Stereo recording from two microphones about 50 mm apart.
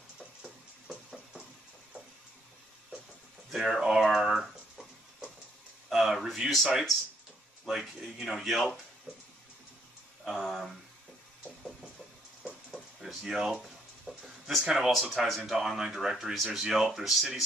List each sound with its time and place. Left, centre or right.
0.4 s music: centre
3.5 s speech: centre
5.9 s speech: centre
10.2 s speech: centre
12.7 s a sound: centre
14.6 s speech: centre
14.9 s speech: centre